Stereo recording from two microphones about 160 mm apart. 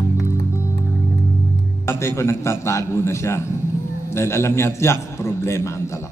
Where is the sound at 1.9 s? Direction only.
15° left (ahead or behind).